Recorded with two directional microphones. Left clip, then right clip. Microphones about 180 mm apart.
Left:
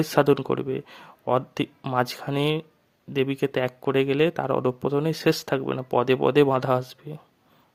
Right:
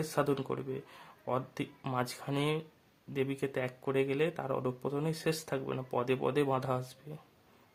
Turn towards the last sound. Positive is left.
turn(degrees=35)  # may be behind; listen again after turning